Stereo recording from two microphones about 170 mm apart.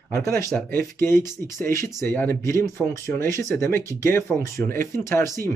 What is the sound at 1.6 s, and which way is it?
Speech, 15° left (ahead or behind).